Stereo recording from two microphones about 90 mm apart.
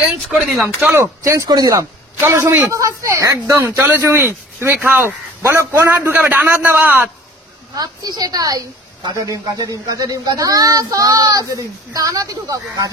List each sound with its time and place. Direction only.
0.8 s speech: 20° right (ahead or behind)
1.2 s speech: 40° right (ahead or behind)
2.1 s speech: 30° right (ahead or behind)
3.7 s a man's voice: 20° right (ahead or behind)
7.7 s a woman's voice: 45° right (ahead or behind)